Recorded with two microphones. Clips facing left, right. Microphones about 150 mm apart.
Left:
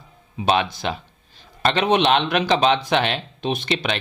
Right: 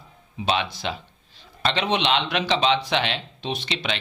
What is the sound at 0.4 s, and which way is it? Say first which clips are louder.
Speech: left 5 dB; 50° left (ahead or behind).